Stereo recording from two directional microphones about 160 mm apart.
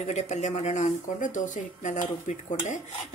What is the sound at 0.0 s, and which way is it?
Speech, 45° left (ahead or behind).